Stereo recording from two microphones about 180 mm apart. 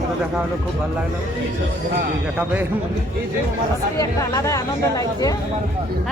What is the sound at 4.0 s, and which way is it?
Speech, 20° left (ahead or behind).